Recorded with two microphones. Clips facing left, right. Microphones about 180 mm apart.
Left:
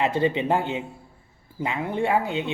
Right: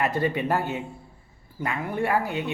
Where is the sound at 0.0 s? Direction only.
20° left (ahead or behind).